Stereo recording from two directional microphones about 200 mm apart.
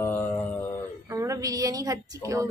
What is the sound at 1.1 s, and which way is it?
A woman's voice, 15° right (ahead or behind).